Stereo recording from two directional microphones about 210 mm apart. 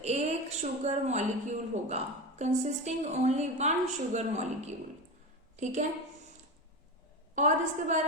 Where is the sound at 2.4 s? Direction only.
35° right (ahead or behind).